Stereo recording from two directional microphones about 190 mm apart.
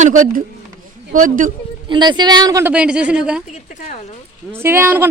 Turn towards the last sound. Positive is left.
turn(degrees=-10)  # may be behind; listen again after turning